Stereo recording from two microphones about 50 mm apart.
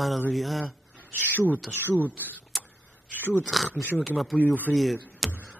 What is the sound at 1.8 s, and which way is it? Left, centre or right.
Speech, left.